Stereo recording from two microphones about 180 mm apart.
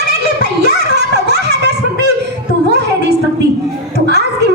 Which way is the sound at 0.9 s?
65° right (ahead or behind).